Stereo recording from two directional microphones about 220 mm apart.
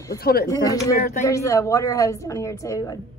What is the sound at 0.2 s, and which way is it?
Speech, 45° left (ahead or behind).